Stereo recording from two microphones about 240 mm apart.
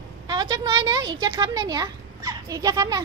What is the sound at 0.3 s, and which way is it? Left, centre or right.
A woman's voice, centre.